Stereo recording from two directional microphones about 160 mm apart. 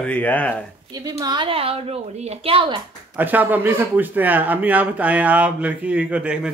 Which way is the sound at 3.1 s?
10° right (ahead or behind).